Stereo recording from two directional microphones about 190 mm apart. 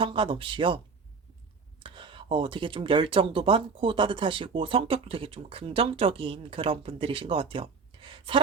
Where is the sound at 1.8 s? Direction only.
25° right (ahead or behind).